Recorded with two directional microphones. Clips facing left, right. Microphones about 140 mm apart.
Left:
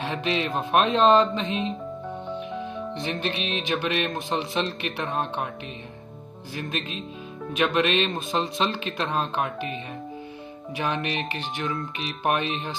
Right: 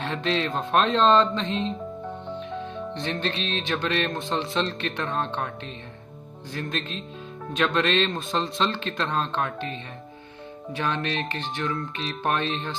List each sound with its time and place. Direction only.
0.2 s speech: 10° left (ahead or behind)
2.9 s speech: 10° left (ahead or behind)
6.5 s speech: 10° left (ahead or behind)
10.8 s speech: 15° left (ahead or behind)